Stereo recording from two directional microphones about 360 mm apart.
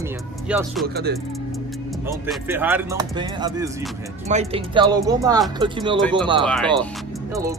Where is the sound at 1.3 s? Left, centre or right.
Centre.